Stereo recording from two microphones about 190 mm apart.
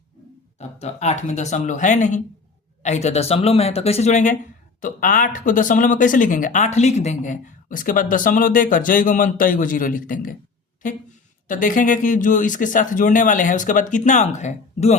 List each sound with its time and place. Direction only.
0.8 s speech: 35° left (ahead or behind)
11.4 s speech: 45° left (ahead or behind)